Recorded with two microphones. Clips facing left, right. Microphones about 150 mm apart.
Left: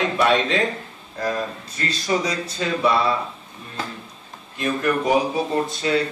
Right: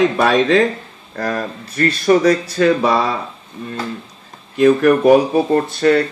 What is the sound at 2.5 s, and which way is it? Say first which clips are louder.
Speech: right 7 dB; 70° right (ahead or behind).